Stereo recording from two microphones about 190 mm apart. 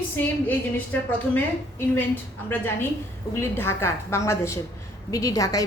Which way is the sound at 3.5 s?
10° left (ahead or behind).